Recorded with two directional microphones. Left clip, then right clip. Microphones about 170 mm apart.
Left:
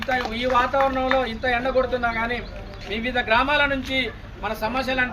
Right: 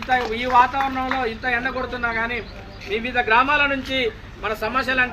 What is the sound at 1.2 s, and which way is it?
A man's voice, 90° left.